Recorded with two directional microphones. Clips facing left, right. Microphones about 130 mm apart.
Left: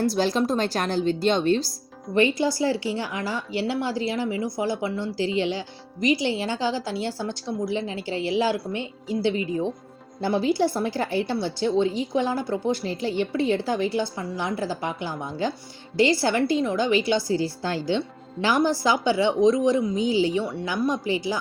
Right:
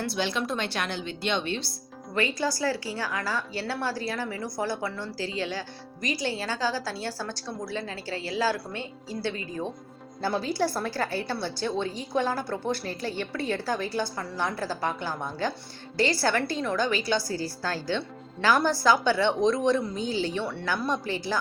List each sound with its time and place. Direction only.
0.0 s a woman's voice: 40° left (ahead or behind)
2.1 s a woman's voice: 20° left (ahead or behind)